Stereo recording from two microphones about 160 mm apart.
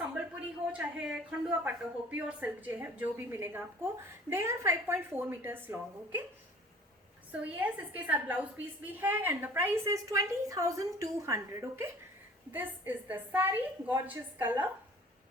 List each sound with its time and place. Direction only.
0.7 s a woman's voice: 5° right (ahead or behind)
7.3 s a woman's voice: 10° right (ahead or behind)